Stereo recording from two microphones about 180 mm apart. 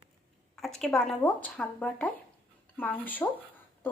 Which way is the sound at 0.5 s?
Centre (ahead or behind).